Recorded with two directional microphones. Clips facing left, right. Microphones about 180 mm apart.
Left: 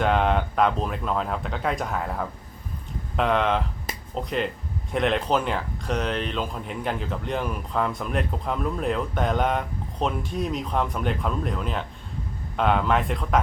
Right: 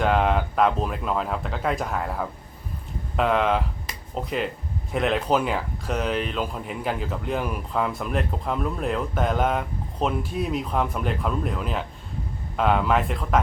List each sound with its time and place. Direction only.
0.0 s speech: centre (ahead or behind)